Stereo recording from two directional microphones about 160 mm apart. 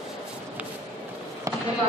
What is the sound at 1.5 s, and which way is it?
Basketball bounce, 20° right (ahead or behind).